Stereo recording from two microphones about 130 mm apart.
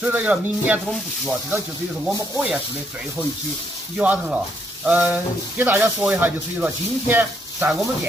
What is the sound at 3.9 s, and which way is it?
Speech, 10° right (ahead or behind).